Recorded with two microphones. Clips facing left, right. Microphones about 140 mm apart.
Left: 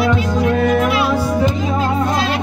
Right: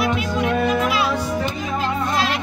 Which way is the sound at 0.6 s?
55° left (ahead or behind).